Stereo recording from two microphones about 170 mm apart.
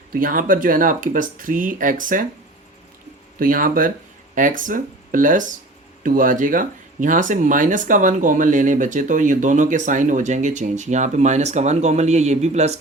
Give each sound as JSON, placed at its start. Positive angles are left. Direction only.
{"t": 0.1, "sound": "speech", "side_deg": -55}
{"t": 3.3, "sound": "speech", "side_deg": -55}